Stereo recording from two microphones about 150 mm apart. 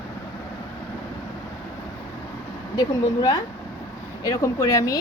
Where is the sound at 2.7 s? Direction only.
25° left (ahead or behind).